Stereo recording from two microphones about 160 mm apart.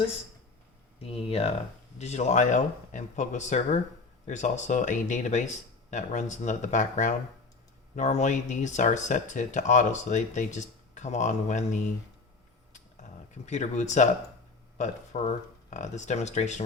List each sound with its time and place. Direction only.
0.9 s speech: 40° left (ahead or behind)
12.7 s a sound: 45° left (ahead or behind)
14.8 s speech: 50° left (ahead or behind)